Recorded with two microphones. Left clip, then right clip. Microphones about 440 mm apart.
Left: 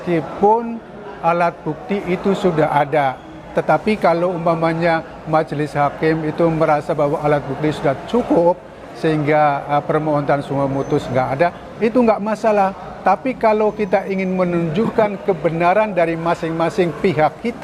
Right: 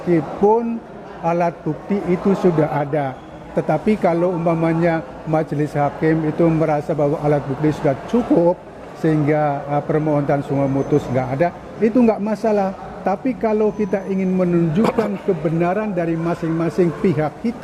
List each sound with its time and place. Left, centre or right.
0.1 s a man's voice: left
9.0 s a man's voice: left